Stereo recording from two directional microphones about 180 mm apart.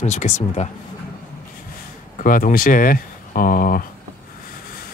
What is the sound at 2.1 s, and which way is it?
Speech, 45° left (ahead or behind).